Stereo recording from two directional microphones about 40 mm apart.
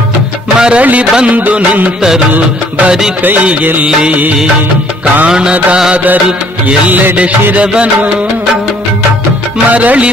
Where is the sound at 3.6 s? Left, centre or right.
Right.